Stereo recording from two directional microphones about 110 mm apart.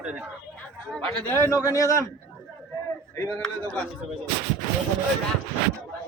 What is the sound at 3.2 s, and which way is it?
Speech, 25° left (ahead or behind).